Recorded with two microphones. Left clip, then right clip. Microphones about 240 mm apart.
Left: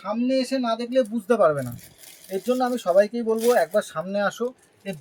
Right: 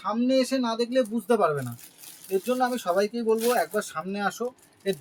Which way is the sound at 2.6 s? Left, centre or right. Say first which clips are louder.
Left 8 dB; right.